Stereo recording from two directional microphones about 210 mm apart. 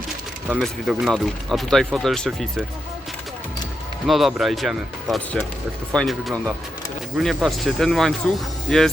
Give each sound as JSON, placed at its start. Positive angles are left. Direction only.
{"t": 0.4, "sound": "speech", "side_deg": -5}
{"t": 4.0, "sound": "speech", "side_deg": 0}